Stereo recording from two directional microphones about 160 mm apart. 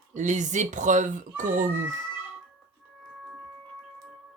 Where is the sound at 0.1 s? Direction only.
50° right (ahead or behind).